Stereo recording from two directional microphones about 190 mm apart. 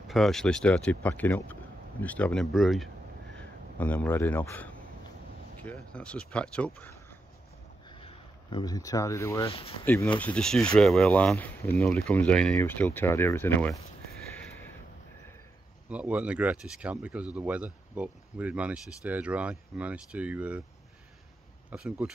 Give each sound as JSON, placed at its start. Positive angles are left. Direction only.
{"t": 0.1, "sound": "speech", "side_deg": 0}
{"t": 7.9, "sound": "speech", "side_deg": 25}
{"t": 9.5, "sound": "speech", "side_deg": 30}
{"t": 9.8, "sound": "speech", "side_deg": 10}
{"t": 15.9, "sound": "speech", "side_deg": -5}
{"t": 21.6, "sound": "speech", "side_deg": -5}